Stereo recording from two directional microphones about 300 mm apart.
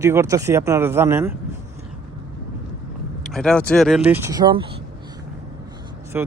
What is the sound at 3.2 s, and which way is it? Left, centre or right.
Speech, centre.